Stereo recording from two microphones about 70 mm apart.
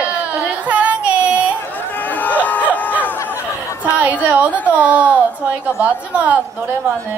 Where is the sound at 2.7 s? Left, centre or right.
Left.